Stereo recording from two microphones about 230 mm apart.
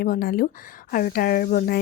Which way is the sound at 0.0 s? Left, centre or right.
Left.